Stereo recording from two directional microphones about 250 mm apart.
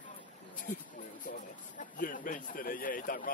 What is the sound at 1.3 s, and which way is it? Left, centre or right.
Speech, left.